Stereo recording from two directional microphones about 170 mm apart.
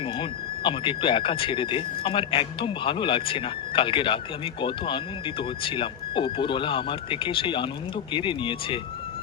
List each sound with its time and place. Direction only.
0.0 s speech: 30° left (ahead or behind)